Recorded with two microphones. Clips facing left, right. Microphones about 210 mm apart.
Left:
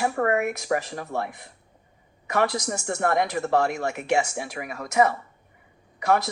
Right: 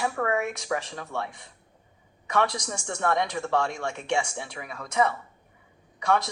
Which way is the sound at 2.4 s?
60° left (ahead or behind).